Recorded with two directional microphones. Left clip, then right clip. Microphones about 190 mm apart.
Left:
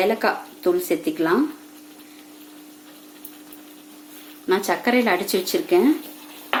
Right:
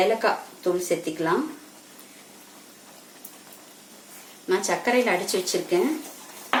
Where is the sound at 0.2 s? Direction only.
45° left (ahead or behind).